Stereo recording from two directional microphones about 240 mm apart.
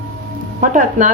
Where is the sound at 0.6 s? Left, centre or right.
Right.